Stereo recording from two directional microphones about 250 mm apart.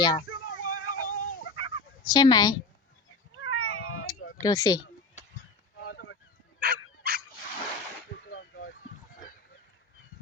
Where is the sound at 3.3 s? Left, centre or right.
Left.